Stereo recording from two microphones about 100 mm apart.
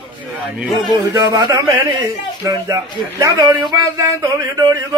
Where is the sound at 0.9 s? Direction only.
45° right (ahead or behind).